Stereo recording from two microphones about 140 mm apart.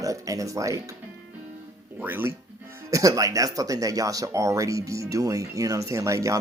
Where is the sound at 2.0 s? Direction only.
15° right (ahead or behind).